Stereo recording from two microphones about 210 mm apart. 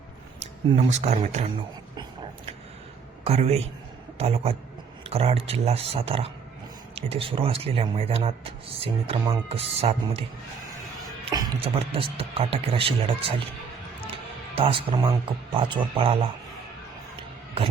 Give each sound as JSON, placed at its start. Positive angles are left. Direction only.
{"t": 0.7, "sound": "speech", "side_deg": -30}
{"t": 3.2, "sound": "speech", "side_deg": -30}
{"t": 11.3, "sound": "speech", "side_deg": -20}
{"t": 14.5, "sound": "speech", "side_deg": -25}